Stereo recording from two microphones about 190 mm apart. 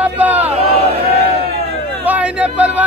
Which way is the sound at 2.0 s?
5° right (ahead or behind).